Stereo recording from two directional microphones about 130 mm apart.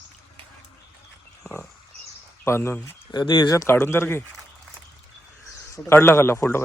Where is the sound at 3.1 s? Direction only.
35° left (ahead or behind); by 4.2 s 20° left (ahead or behind).